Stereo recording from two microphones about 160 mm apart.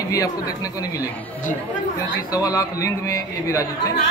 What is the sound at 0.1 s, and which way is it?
Speech, 20° left (ahead or behind).